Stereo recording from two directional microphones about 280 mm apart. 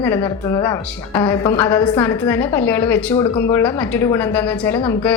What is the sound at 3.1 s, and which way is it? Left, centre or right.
Speech, centre.